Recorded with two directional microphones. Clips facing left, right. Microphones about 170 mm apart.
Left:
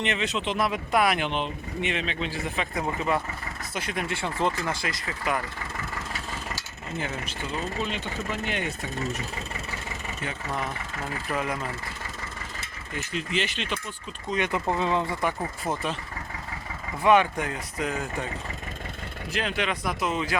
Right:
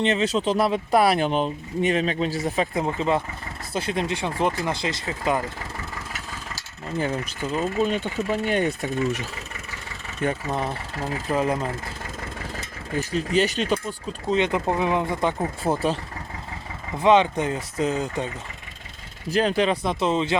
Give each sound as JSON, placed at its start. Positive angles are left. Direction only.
{"t": 0.0, "sound": "speech", "side_deg": -35}
{"t": 2.7, "sound": "speech", "side_deg": -25}
{"t": 6.6, "sound": "mechanisms", "side_deg": -40}
{"t": 7.8, "sound": "speech", "side_deg": -45}
{"t": 10.5, "sound": "speech", "side_deg": -30}
{"t": 14.3, "sound": "speech", "side_deg": -25}
{"t": 15.7, "sound": "speech", "side_deg": -35}
{"t": 17.0, "sound": "speech", "side_deg": -20}
{"t": 19.3, "sound": "speech", "side_deg": -35}